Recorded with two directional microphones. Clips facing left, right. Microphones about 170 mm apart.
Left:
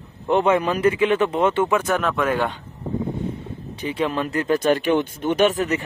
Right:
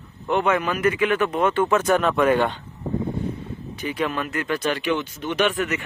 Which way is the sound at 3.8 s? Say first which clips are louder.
Left 2 dB; 30° left (ahead or behind).